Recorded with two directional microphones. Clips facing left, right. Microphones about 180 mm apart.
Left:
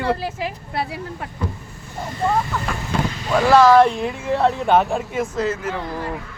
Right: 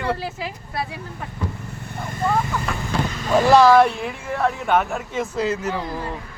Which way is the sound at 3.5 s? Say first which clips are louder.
Left 1 dB; 15° right (ahead or behind).